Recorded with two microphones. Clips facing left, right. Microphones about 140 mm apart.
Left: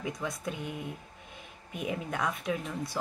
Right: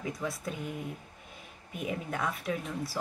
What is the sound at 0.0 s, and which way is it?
Speech, centre (ahead or behind).